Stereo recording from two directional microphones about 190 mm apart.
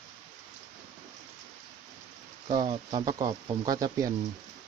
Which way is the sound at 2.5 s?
20° right (ahead or behind).